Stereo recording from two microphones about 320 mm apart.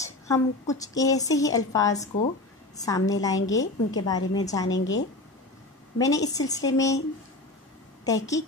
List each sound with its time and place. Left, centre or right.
0.0 s a woman's voice: centre
4.6 s a woman's voice: left
5.9 s a woman's voice: centre
8.0 s a woman's voice: centre